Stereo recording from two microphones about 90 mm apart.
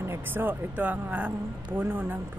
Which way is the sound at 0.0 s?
25° right (ahead or behind).